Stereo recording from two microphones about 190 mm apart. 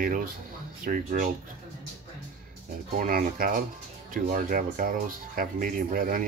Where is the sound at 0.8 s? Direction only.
50° right (ahead or behind).